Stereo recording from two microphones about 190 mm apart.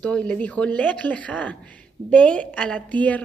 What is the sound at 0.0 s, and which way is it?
A woman's voice, 5° left (ahead or behind).